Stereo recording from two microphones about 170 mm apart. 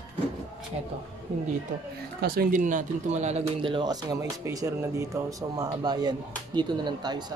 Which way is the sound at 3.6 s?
25° right (ahead or behind).